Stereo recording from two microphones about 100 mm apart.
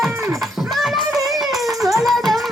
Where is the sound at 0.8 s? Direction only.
Centre (ahead or behind).